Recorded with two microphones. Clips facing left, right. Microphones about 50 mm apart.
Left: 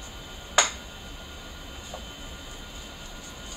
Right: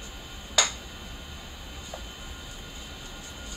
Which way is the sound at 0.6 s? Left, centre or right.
Left.